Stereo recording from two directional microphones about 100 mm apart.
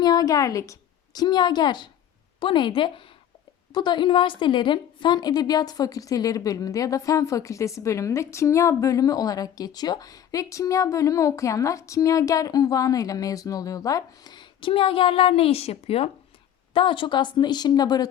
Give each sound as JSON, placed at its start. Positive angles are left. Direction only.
{"t": 0.0, "sound": "a woman's voice", "side_deg": 40}
{"t": 3.7, "sound": "a woman's voice", "side_deg": 45}
{"t": 14.7, "sound": "a woman's voice", "side_deg": 65}
{"t": 16.7, "sound": "speech", "side_deg": 60}